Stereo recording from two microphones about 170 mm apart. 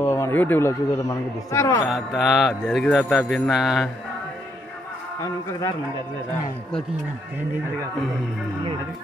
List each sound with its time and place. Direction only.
0.0 s speech: 15° left (ahead or behind)
1.9 s mantra: centre (ahead or behind)
5.2 s a man's voice: 20° left (ahead or behind)